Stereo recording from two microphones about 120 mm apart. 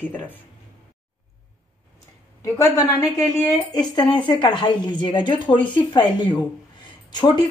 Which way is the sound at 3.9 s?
40° left (ahead or behind).